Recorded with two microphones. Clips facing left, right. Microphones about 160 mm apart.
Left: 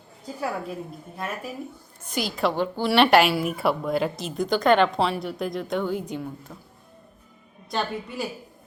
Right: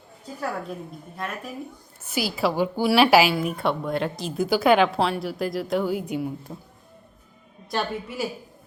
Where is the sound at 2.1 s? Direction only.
5° right (ahead or behind).